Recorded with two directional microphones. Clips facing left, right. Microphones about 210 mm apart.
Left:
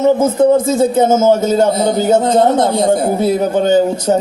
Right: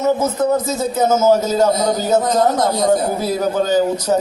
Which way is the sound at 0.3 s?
30° left (ahead or behind).